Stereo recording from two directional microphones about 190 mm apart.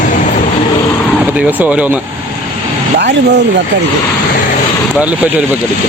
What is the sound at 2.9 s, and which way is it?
Speech, 65° right (ahead or behind).